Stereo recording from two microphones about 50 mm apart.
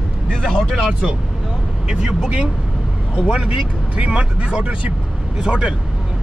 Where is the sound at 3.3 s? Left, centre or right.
Right.